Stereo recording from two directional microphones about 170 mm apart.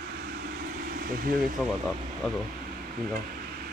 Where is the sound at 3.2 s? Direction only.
60° right (ahead or behind).